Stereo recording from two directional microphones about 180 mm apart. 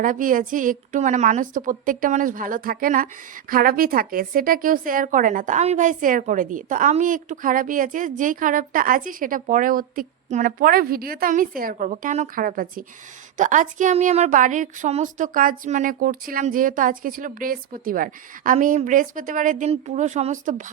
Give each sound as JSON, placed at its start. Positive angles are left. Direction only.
{"t": 0.0, "sound": "a woman's voice", "side_deg": -50}